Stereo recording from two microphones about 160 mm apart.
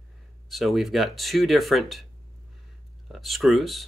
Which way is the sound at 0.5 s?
Centre (ahead or behind).